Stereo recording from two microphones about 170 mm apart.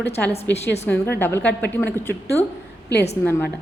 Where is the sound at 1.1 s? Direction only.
10° left (ahead or behind).